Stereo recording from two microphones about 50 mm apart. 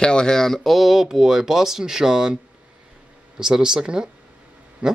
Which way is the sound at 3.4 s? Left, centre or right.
Centre.